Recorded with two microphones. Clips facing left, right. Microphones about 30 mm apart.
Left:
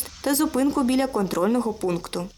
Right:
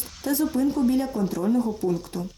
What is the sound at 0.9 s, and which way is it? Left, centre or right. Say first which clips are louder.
Speech: left 2 dB; left.